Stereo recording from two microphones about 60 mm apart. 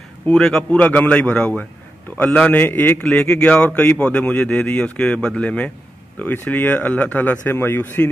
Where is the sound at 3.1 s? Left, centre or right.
Centre.